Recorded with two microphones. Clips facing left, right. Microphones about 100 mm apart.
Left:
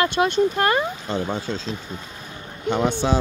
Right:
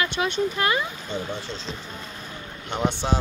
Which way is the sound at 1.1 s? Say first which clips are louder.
Left 5 dB; 90° left.